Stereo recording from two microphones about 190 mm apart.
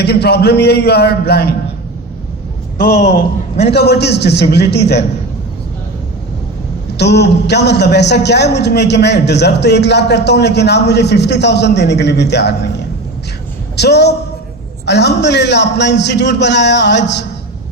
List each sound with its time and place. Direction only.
0.0 s a man's voice: 60° left (ahead or behind)
3.7 s a man's voice: 60° left (ahead or behind)
6.9 s a man's voice: 60° left (ahead or behind)
13.7 s a woman's voice: 60° left (ahead or behind)